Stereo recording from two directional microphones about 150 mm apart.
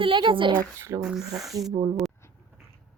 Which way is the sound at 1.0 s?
5° right (ahead or behind).